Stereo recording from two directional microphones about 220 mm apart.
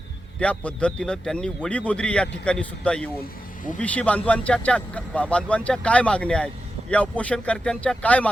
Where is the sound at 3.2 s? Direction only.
35° left (ahead or behind).